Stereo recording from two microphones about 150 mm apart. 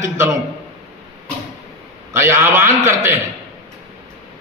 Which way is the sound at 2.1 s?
15° right (ahead or behind).